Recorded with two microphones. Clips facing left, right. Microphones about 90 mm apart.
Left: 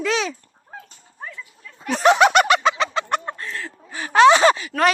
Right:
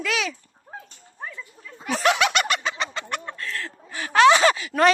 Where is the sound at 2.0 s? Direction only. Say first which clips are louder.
Left 7 dB; 40° left (ahead or behind).